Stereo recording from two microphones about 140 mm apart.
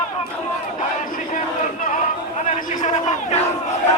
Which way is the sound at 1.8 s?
70° left (ahead or behind).